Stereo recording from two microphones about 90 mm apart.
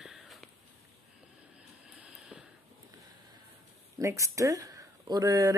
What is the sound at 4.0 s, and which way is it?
Speech, 35° right (ahead or behind).